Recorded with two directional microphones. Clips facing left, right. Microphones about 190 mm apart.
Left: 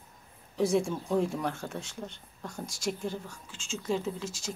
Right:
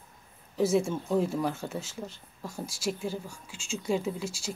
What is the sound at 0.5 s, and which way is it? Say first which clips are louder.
Speech: right 1 dB; 5° right (ahead or behind).